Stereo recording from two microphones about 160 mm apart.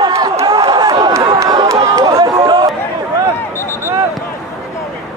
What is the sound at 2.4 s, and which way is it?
Chatter, 30° right (ahead or behind).